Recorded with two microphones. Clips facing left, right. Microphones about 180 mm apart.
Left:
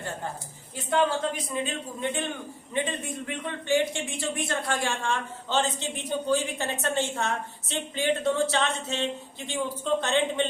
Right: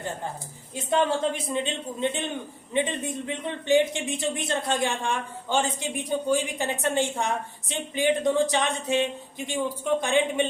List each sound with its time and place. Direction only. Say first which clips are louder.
1.6 s a man's voice: right 3 dB; 20° right (ahead or behind)